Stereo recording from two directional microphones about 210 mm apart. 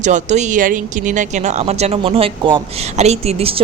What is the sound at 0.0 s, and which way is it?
Speech, 35° right (ahead or behind).